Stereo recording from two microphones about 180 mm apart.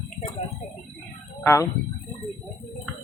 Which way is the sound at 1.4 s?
15° left (ahead or behind).